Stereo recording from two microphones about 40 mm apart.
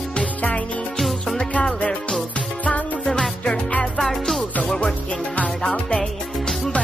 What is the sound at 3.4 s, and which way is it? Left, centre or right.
Music, left.